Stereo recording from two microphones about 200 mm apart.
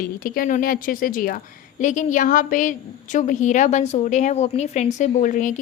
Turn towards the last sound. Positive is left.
turn(degrees=40)  # may be behind; listen again after turning